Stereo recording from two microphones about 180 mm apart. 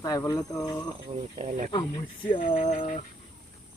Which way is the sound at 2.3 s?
30° left (ahead or behind).